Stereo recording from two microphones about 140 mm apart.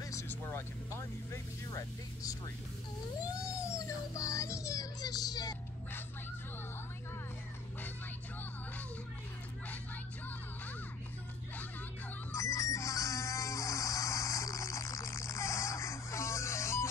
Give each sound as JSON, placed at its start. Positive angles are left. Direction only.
{"t": 0.0, "sound": "speech", "side_deg": 20}
{"t": 3.3, "sound": "child singing", "side_deg": 25}
{"t": 12.4, "sound": "insect", "side_deg": 25}